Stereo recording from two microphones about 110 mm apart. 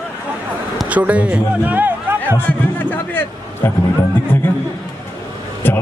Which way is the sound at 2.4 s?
15° left (ahead or behind).